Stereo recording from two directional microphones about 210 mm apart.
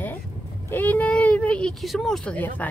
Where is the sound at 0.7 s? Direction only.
10° left (ahead or behind).